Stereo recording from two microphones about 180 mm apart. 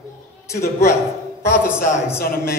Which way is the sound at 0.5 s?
15° left (ahead or behind).